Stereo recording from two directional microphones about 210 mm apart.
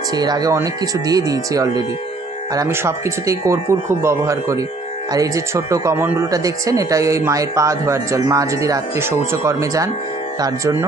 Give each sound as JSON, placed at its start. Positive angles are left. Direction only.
{"t": 0.2, "sound": "speech", "side_deg": -20}